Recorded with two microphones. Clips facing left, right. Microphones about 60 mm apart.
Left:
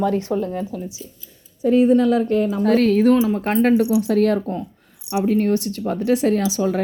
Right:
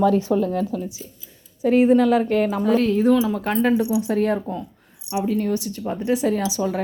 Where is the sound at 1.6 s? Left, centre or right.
Right.